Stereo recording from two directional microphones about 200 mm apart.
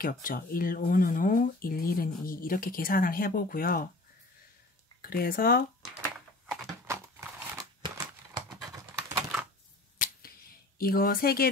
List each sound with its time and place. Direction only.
0.0 s speech: 45° left (ahead or behind)
5.0 s speech: 45° left (ahead or behind)
6.9 s crumpling: 15° right (ahead or behind)
7.8 s a sound: 15° right (ahead or behind)
8.6 s typing: 15° right (ahead or behind)
9.9 s finger snapping: 50° left (ahead or behind)